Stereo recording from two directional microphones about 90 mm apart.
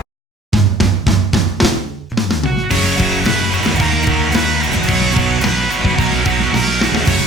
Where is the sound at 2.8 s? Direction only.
Centre (ahead or behind).